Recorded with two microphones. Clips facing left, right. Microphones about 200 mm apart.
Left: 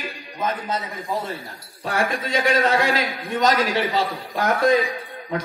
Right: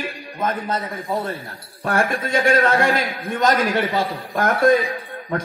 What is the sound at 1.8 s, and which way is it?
A man's voice, 50° right (ahead or behind).